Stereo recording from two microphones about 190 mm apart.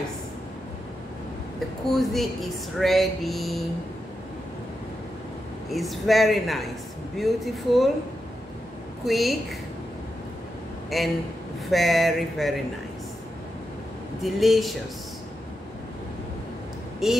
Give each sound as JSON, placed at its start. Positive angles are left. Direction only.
{"t": 1.9, "sound": "speech", "side_deg": 0}
{"t": 5.7, "sound": "speech", "side_deg": 0}
{"t": 9.0, "sound": "speech", "side_deg": 0}
{"t": 10.9, "sound": "speech", "side_deg": 0}
{"t": 14.2, "sound": "speech", "side_deg": 0}
{"t": 17.0, "sound": "speech", "side_deg": 0}